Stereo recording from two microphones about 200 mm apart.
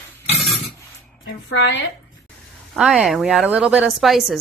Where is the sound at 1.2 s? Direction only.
65° left (ahead or behind).